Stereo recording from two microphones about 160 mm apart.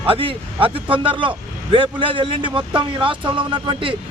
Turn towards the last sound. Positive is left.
turn(degrees=-30)  # may be behind; listen again after turning